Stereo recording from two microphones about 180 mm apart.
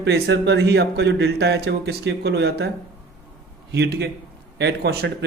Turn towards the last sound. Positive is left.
turn(degrees=-65)  # may be behind; listen again after turning